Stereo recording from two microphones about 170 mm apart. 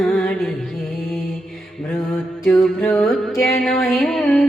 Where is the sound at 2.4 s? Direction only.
5° left (ahead or behind).